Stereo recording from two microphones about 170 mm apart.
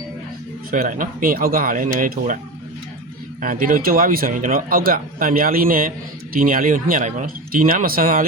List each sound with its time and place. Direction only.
0.7 s a man's voice: 50° right (ahead or behind)
3.4 s a man's voice: 55° right (ahead or behind)